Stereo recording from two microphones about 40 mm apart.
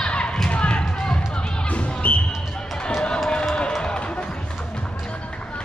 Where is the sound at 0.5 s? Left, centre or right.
Left.